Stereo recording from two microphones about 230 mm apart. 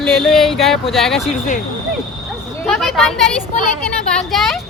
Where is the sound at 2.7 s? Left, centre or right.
Centre.